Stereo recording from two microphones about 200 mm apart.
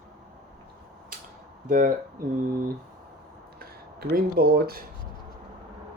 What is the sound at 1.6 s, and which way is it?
Speech, 40° right (ahead or behind).